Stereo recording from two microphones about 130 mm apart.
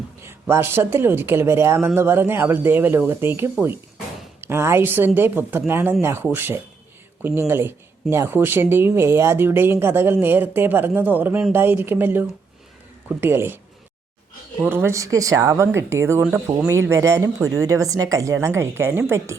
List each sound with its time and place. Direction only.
0.3 s speech: 20° right (ahead or behind)
14.6 s speech: 15° right (ahead or behind)